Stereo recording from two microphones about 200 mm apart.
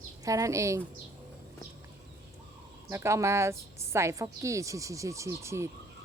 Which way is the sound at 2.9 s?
15° right (ahead or behind).